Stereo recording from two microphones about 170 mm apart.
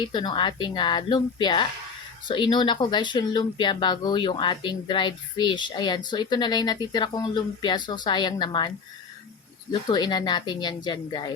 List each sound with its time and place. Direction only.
0.0 s speech: 25° left (ahead or behind)
9.8 s speech: 25° left (ahead or behind)